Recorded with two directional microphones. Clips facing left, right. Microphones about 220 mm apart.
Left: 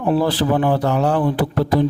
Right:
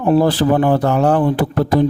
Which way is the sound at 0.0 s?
45° right (ahead or behind).